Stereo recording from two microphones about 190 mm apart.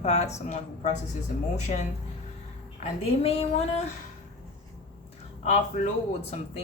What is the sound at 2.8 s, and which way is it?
A woman's voice, 30° left (ahead or behind).